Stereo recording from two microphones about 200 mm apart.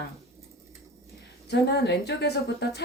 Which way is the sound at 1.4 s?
55° left (ahead or behind).